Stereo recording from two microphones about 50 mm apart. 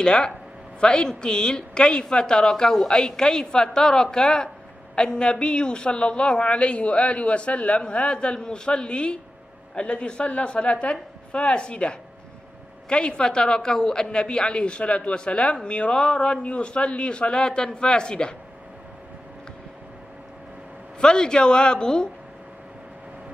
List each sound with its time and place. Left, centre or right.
0.0 s a woman's voice: centre
21.0 s a woman's voice: centre